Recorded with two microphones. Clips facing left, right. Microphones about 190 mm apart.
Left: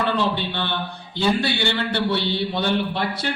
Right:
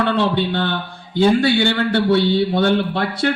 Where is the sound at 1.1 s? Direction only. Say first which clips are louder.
Right 7 dB; 50° right (ahead or behind).